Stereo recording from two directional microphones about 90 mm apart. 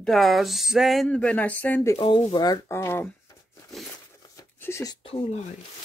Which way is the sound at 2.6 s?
30° left (ahead or behind).